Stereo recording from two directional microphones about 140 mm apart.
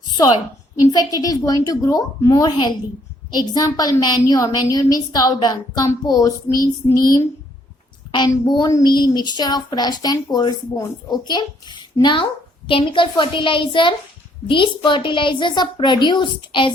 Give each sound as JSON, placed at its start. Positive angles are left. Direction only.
{"t": 0.1, "sound": "a sound", "side_deg": 30}
{"t": 0.8, "sound": "speech", "side_deg": 25}
{"t": 8.3, "sound": "a woman's voice", "side_deg": 30}